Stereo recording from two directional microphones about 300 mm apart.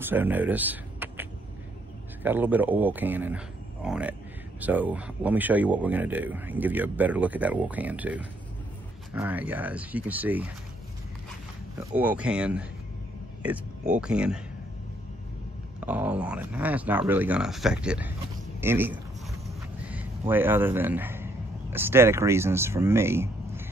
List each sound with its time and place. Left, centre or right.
0.0 s speech: centre
2.2 s speech: centre
11.8 s speech: centre
15.8 s speech: centre
19.4 s a sound: centre
21.7 s speech: centre